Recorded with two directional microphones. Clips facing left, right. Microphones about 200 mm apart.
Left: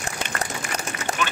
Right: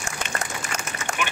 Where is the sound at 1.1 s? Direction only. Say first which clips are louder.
Left 2 dB; 35° left (ahead or behind).